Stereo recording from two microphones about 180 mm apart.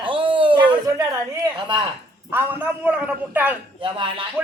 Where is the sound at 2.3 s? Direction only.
10° right (ahead or behind).